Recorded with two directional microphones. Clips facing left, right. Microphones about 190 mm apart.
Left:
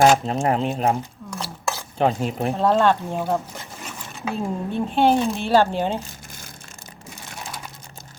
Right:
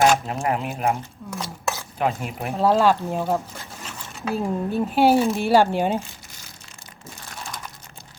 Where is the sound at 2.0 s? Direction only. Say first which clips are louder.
Left 4 dB; 30° left (ahead or behind).